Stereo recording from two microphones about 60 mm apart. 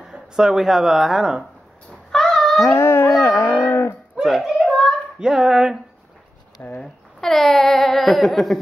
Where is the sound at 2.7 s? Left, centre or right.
Left.